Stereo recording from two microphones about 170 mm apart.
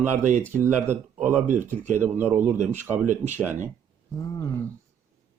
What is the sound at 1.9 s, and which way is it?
Speech, 10° right (ahead or behind).